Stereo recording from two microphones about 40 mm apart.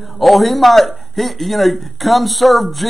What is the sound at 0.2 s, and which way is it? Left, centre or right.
A man's voice, centre.